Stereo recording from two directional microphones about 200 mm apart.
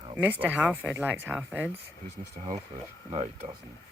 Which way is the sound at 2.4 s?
35° right (ahead or behind).